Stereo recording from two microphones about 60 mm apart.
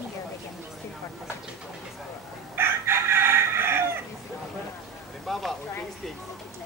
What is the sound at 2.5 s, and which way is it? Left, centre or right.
Chicken, right.